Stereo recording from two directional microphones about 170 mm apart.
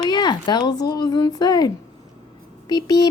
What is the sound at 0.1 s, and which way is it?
Speech, 25° left (ahead or behind).